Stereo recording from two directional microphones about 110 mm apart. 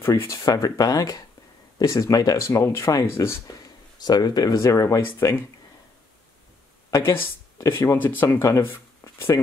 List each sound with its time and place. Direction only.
0.0 s speech: 25° left (ahead or behind)
4.0 s speech: 40° left (ahead or behind); by 5.4 s 25° left (ahead or behind)
7.0 s speech: 20° left (ahead or behind)